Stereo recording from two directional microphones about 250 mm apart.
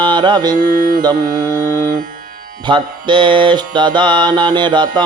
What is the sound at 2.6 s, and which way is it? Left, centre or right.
Mantra, centre.